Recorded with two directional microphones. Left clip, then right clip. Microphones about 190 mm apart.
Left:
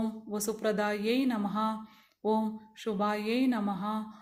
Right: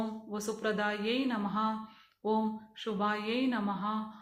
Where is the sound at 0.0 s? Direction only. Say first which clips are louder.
Left 2 dB; 45° left (ahead or behind).